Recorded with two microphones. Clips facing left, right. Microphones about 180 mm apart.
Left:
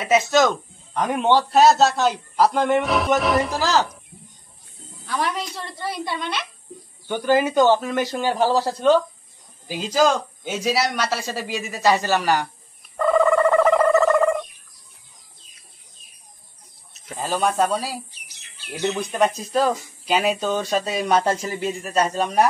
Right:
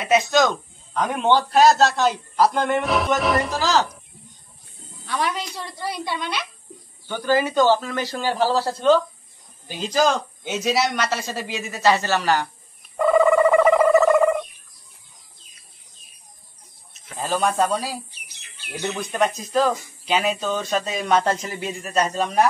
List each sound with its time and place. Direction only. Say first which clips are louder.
0.0 s a man's voice: left 1 dB; 5° left (ahead or behind)
5.0 s a man's voice: even; centre (ahead or behind)
7.1 s speech: left 2 dB; 15° left (ahead or behind)
12.9 s bird: right 1 dB; 5° right (ahead or behind)
17.2 s a man's voice: even; centre (ahead or behind)